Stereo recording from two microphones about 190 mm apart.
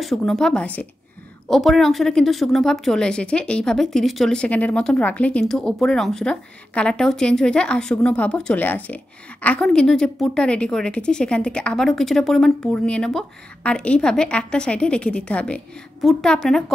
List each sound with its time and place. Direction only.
0.0 s a woman's voice: centre (ahead or behind)